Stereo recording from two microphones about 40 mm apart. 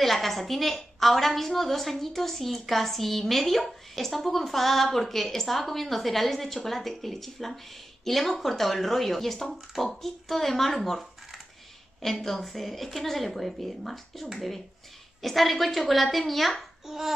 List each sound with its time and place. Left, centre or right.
0.0 s a woman's voice: centre
15.2 s a woman's voice: centre
16.8 s babbling: centre